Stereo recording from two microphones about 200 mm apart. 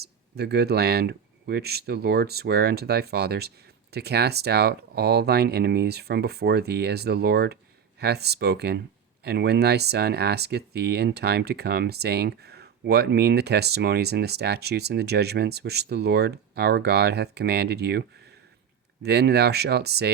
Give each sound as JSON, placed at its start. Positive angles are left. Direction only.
{"t": 0.0, "sound": "speech", "side_deg": -55}